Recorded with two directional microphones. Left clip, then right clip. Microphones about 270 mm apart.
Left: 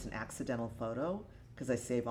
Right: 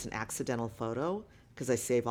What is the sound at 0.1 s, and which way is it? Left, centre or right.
A man's voice, right.